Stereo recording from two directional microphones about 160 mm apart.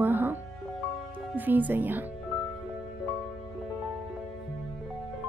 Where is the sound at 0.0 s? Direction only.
10° right (ahead or behind).